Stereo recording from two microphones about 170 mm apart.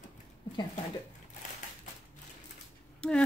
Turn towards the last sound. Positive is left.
turn(degrees=5)  # may be behind; listen again after turning